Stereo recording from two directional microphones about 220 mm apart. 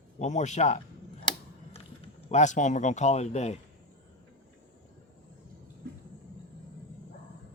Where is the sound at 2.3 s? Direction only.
35° left (ahead or behind).